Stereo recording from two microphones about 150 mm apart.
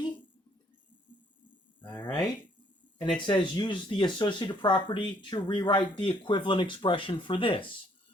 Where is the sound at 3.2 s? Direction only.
30° left (ahead or behind).